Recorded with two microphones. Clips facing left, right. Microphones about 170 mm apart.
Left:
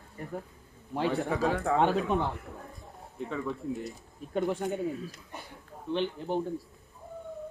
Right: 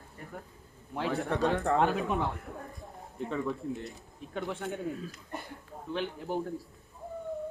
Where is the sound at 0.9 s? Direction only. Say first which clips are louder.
Left 2 dB; centre (ahead or behind).